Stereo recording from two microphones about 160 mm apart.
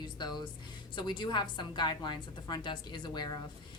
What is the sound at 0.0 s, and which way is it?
Speech, 25° left (ahead or behind).